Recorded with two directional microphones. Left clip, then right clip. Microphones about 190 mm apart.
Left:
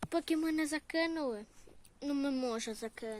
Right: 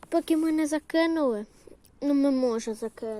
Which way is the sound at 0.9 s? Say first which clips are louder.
Right 12 dB; 25° right (ahead or behind).